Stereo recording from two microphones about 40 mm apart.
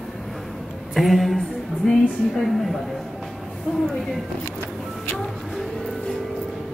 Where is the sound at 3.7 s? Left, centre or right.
Centre.